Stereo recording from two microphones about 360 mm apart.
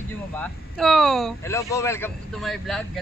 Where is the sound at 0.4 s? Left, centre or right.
Centre.